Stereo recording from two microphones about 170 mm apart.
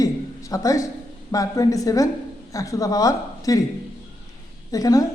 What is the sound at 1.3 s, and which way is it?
A woman's voice, 20° left (ahead or behind).